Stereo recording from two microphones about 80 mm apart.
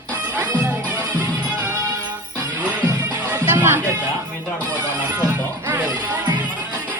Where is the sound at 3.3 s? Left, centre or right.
Right.